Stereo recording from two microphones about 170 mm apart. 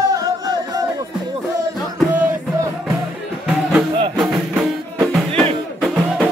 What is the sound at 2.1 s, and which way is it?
Music, 10° right (ahead or behind).